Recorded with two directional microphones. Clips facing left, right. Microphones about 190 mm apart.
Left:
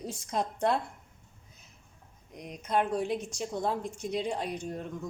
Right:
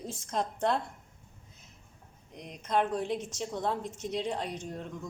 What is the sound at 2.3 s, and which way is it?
Speech, 5° left (ahead or behind).